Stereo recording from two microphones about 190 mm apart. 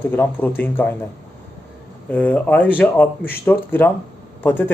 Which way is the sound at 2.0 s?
5° left (ahead or behind).